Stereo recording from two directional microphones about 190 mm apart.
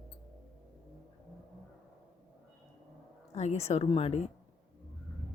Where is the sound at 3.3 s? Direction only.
35° left (ahead or behind).